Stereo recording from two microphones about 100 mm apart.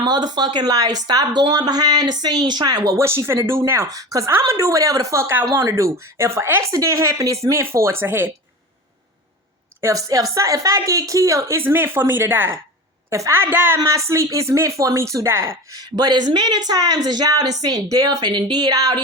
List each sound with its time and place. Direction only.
0.0 s a woman's voice: 45° right (ahead or behind); by 8.3 s 20° right (ahead or behind)
9.8 s a woman's voice: 35° right (ahead or behind); by 13.7 s 20° right (ahead or behind)
13.7 s a woman's voice: 30° right (ahead or behind)
15.8 s a woman's voice: 40° right (ahead or behind)